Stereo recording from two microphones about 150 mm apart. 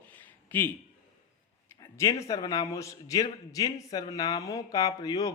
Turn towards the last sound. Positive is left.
turn(degrees=25)  # may be behind; listen again after turning